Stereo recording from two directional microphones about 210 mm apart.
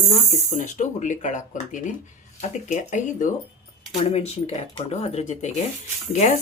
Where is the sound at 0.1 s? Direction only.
35° left (ahead or behind).